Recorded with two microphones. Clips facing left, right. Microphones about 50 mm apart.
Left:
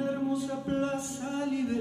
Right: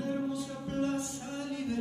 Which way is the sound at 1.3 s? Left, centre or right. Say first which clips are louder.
Left 6 dB; left.